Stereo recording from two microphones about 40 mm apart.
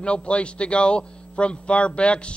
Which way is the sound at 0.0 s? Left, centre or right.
Left.